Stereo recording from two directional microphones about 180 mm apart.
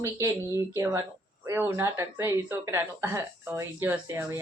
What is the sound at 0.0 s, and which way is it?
Speech, 15° right (ahead or behind).